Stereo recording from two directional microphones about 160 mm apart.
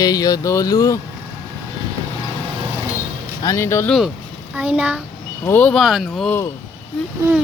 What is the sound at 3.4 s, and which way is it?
Speech, 20° left (ahead or behind).